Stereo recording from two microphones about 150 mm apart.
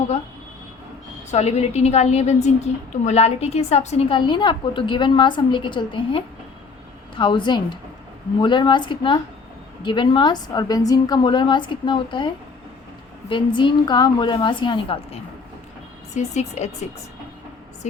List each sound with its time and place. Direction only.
1.3 s a woman's voice: 50° left (ahead or behind)
4.1 s a woman's voice: 30° left (ahead or behind)
16.1 s a woman's voice: 50° left (ahead or behind)